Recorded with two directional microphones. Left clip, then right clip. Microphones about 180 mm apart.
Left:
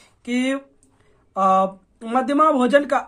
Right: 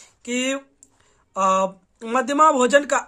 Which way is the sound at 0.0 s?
15° right (ahead or behind).